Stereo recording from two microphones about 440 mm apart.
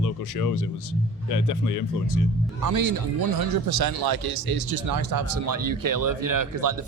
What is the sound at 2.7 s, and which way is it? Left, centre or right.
Speech, right.